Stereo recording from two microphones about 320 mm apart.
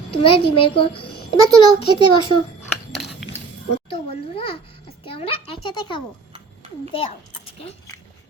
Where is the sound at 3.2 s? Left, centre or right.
Centre.